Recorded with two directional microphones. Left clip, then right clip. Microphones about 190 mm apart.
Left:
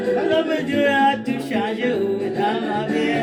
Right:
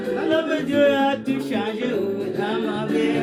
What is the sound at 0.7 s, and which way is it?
Music, 15° right (ahead or behind).